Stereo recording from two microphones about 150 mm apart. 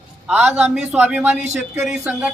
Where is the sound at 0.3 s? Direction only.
5° right (ahead or behind).